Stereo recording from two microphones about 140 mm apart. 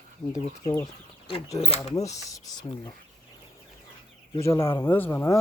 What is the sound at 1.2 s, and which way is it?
Speech, 45° left (ahead or behind).